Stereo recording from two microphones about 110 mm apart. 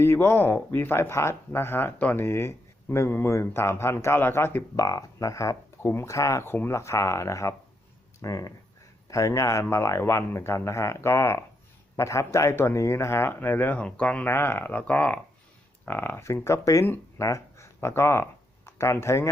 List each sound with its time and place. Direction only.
0.0 s speech: 25° left (ahead or behind)